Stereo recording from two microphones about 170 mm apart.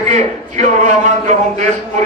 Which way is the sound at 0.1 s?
45° right (ahead or behind).